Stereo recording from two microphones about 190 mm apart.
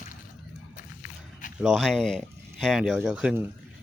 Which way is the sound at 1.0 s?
45° left (ahead or behind).